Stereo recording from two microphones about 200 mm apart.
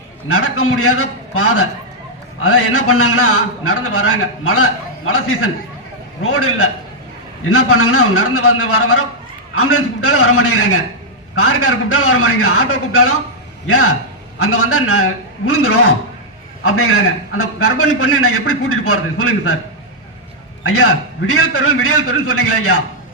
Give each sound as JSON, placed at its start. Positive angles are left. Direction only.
{"t": 0.3, "sound": "a man's voice", "side_deg": 90}
{"t": 20.7, "sound": "a man's voice", "side_deg": 90}